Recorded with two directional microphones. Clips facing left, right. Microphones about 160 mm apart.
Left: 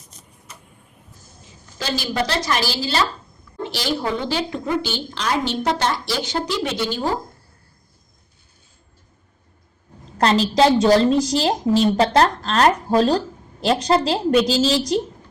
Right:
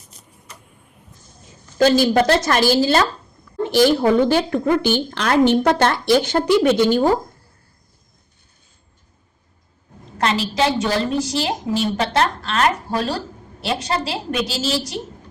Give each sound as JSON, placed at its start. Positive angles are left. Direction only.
{"t": 1.8, "sound": "a woman's voice", "side_deg": -50}
{"t": 10.2, "sound": "a woman's voice", "side_deg": 35}